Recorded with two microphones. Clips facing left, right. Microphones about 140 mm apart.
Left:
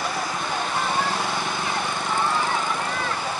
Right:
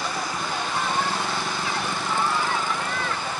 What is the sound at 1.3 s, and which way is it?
Vehicle, 20° left (ahead or behind).